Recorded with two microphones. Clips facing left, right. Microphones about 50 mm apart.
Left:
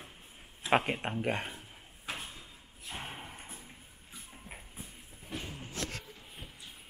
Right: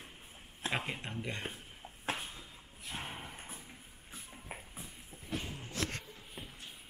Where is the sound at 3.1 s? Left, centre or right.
Centre.